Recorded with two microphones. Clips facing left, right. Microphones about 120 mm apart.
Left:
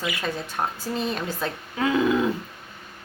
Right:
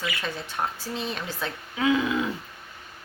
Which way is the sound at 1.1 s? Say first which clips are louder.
Left 4 dB; 40° left (ahead or behind).